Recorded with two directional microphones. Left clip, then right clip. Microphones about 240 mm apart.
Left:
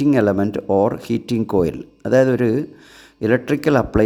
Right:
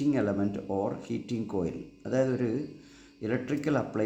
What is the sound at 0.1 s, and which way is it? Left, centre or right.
Speech, left.